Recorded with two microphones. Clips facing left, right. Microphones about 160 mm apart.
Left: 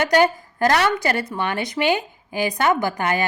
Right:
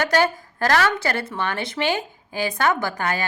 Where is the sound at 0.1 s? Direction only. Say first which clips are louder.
Left 3 dB; 15° left (ahead or behind).